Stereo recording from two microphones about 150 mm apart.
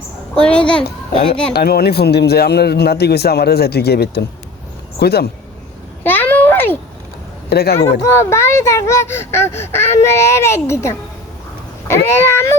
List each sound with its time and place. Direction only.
0.3 s speech: 5° left (ahead or behind)
1.5 s speech: 90° left
6.0 s a sound: 10° left (ahead or behind)
7.5 s speech: 90° left
8.0 s speech: 15° left (ahead or behind)